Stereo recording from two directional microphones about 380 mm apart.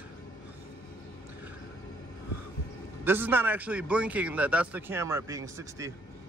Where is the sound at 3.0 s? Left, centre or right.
Centre.